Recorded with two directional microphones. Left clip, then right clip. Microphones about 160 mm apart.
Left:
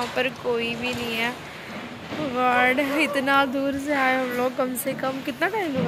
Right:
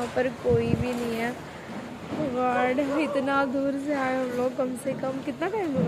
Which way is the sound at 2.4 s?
Centre (ahead or behind).